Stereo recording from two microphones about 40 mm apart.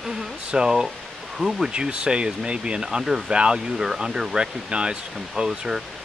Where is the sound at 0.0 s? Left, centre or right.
Centre.